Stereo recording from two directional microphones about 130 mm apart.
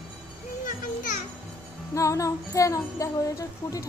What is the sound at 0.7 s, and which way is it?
Children playing, 85° left.